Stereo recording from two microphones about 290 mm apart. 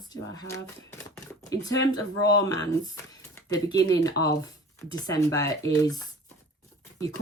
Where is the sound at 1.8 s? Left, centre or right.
Right.